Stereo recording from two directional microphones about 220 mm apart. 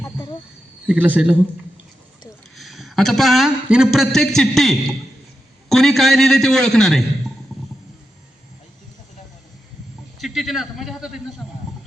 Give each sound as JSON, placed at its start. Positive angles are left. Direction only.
{"t": 0.0, "sound": "cricket", "side_deg": 20}
{"t": 0.9, "sound": "speech", "side_deg": -5}
{"t": 2.6, "sound": "a man's voice", "side_deg": 0}
{"t": 10.2, "sound": "a man's voice", "side_deg": 0}